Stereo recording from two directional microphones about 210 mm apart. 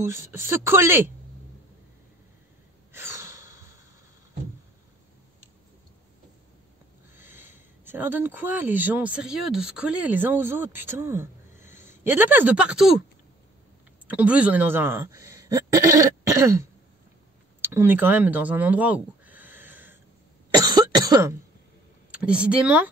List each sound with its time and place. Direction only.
0.0 s speech: 10° right (ahead or behind)
2.9 s snort: 10° right (ahead or behind)
7.2 s speech: 10° right (ahead or behind)
14.0 s a man's voice: 5° right (ahead or behind)
17.6 s a sound: 10° right (ahead or behind)
20.6 s cough: 20° right (ahead or behind)
22.1 s speech: 5° right (ahead or behind)